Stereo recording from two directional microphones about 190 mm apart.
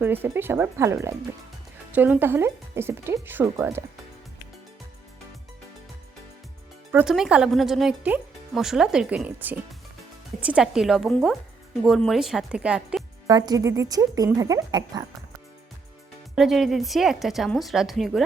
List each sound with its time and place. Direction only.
0.0 s speech: 10° right (ahead or behind)
6.9 s speech: 5° right (ahead or behind)
13.2 s speech: 20° right (ahead or behind)
16.3 s speech: centre (ahead or behind)